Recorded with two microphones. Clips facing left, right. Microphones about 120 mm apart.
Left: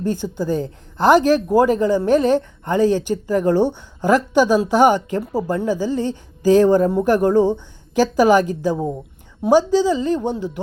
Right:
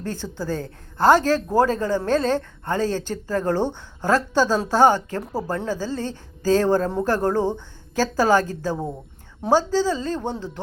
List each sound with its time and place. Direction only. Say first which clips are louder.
0.0 s speech: left 7 dB; 15° left (ahead or behind)